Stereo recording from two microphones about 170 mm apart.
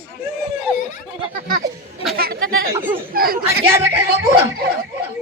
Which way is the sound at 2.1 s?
65° right (ahead or behind).